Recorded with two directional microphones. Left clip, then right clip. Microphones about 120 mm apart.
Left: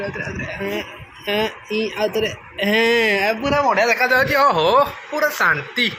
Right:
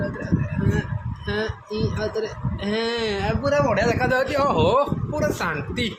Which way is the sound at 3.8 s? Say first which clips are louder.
Left 5 dB; 10° right (ahead or behind).